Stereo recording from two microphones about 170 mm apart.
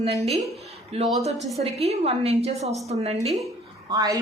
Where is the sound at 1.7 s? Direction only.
40° right (ahead or behind).